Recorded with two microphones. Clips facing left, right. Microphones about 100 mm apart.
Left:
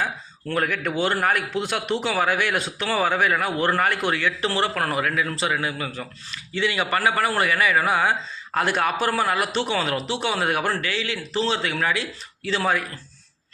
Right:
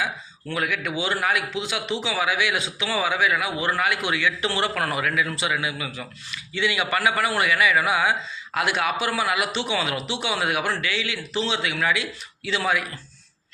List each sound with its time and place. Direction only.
0.5 s a man's voice: 45° left (ahead or behind)